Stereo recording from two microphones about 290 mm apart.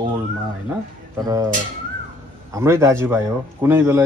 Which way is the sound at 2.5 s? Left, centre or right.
Centre.